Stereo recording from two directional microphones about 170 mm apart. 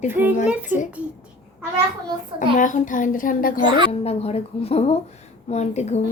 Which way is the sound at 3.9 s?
35° left (ahead or behind).